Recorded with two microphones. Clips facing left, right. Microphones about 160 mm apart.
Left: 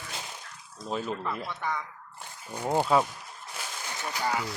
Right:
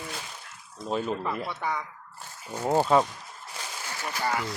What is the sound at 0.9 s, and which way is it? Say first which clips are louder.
Speech: right 3 dB; centre (ahead or behind).